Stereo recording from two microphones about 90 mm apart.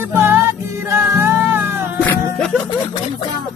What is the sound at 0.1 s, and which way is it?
Music, 25° right (ahead or behind).